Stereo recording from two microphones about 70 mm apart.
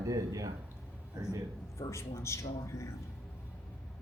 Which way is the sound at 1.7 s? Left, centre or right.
Left.